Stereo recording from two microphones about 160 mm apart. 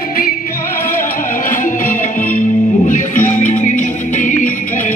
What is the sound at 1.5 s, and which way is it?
Music, 55° left (ahead or behind).